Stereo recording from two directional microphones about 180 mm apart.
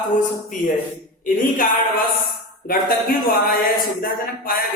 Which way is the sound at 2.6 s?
55° left (ahead or behind).